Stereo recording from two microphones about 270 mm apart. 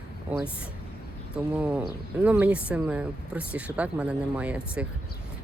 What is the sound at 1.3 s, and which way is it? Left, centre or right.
Speech, centre.